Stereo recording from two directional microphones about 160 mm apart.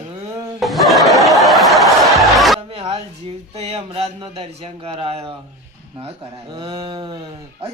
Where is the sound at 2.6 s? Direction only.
35° right (ahead or behind).